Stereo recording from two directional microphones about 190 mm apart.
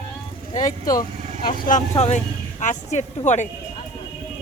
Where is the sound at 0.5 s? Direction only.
40° left (ahead or behind).